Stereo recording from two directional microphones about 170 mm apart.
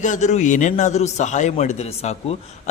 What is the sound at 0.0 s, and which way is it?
A man's voice, 45° left (ahead or behind).